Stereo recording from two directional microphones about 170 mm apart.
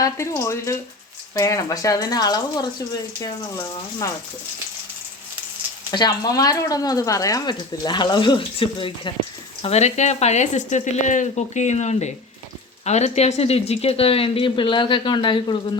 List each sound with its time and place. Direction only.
0.0 s speech: 15° left (ahead or behind)
5.9 s speech: 25° left (ahead or behind)